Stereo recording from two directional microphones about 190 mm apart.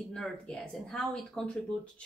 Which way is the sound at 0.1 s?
5° left (ahead or behind).